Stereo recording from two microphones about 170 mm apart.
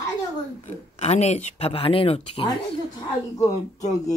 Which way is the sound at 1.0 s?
40° left (ahead or behind).